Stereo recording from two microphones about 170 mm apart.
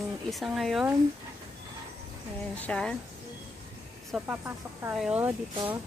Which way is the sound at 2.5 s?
5° left (ahead or behind).